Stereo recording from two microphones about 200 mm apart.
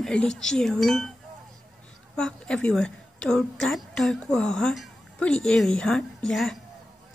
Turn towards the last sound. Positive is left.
turn(degrees=0)  # may be behind; listen again after turning